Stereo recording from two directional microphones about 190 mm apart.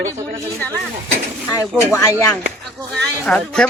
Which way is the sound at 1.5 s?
15° left (ahead or behind).